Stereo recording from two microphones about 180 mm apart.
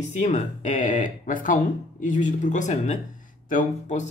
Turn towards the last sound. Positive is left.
turn(degrees=45)  # may be behind; listen again after turning